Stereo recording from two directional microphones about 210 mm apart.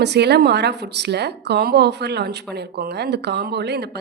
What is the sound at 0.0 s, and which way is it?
Speech, 50° right (ahead or behind).